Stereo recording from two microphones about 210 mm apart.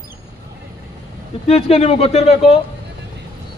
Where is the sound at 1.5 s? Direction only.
30° left (ahead or behind).